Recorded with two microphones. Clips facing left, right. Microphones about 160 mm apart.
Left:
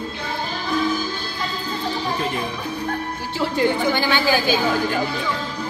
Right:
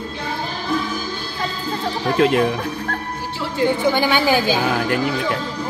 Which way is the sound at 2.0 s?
75° right (ahead or behind).